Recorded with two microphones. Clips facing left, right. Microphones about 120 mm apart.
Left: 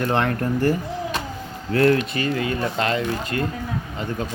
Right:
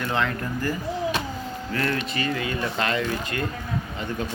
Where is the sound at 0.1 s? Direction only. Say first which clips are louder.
Left 5 dB; 55° left (ahead or behind).